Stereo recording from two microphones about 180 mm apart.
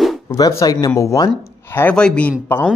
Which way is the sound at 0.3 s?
15° left (ahead or behind).